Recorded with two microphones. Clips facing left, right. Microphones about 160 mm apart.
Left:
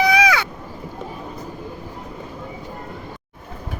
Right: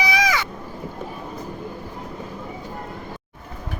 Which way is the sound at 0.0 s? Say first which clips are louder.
Left 5 dB; 60° left (ahead or behind).